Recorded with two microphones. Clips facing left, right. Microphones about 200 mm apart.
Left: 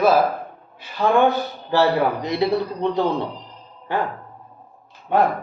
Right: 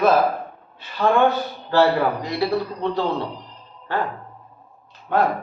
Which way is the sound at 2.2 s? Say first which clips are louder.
Left 2 dB; 20° left (ahead or behind).